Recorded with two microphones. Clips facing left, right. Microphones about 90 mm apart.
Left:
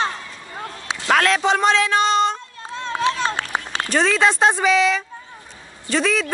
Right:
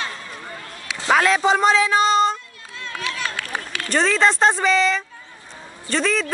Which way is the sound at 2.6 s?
30° left (ahead or behind).